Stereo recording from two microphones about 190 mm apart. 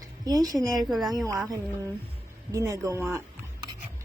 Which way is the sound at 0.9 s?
Centre (ahead or behind).